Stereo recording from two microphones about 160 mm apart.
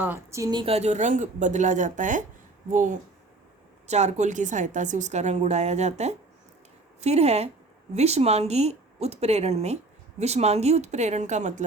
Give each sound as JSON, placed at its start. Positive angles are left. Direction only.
{"t": 0.0, "sound": "a woman's voice", "side_deg": -15}
{"t": 0.6, "sound": "a woman's voice", "side_deg": -40}